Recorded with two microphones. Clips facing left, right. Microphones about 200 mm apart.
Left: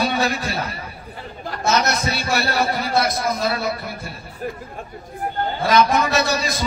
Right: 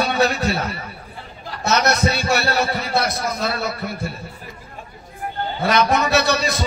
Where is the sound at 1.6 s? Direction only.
65° right (ahead or behind).